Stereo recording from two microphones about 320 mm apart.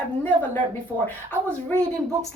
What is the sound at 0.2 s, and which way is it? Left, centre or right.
A woman's voice, centre.